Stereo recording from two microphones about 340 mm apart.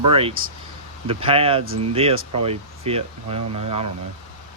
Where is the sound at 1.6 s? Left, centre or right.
Right.